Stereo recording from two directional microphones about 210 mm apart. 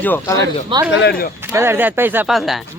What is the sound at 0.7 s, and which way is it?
Speech, 20° right (ahead or behind).